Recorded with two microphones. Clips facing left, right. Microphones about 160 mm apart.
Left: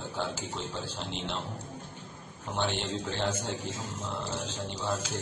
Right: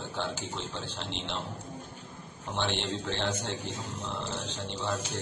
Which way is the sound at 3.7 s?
90° left.